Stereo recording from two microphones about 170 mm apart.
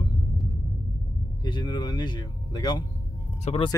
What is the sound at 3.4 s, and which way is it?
Speech, 35° left (ahead or behind).